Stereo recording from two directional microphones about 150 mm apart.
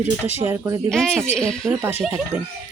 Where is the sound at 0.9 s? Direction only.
5° left (ahead or behind).